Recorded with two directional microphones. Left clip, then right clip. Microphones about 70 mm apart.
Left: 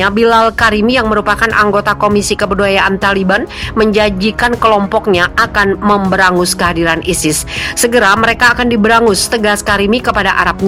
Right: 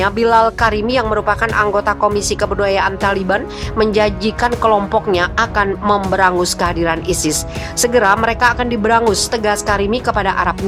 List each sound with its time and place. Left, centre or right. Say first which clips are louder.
0.0 s speech: left 3 dB; left
8.4 s speech: left 5 dB; left